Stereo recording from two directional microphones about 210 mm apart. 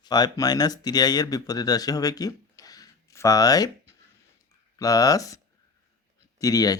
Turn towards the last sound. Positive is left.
turn(degrees=15)  # may be behind; listen again after turning